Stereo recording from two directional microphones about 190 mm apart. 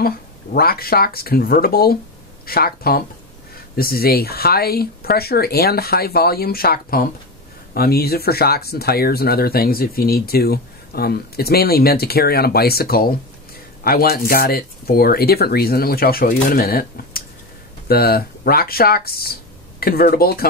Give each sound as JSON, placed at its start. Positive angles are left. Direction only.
{"t": 0.0, "sound": "speech", "side_deg": 55}